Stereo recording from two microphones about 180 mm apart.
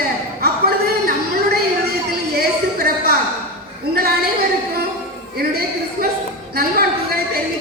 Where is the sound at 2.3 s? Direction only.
60° right (ahead or behind).